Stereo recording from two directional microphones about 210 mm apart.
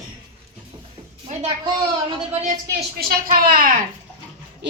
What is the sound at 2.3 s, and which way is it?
A woman's voice, 35° right (ahead or behind).